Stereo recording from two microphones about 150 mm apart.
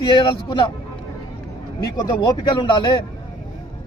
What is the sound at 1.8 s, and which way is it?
A man's voice, 25° left (ahead or behind).